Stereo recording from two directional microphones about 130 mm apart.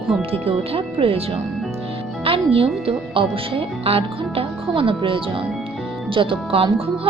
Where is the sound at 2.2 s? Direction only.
45° right (ahead or behind).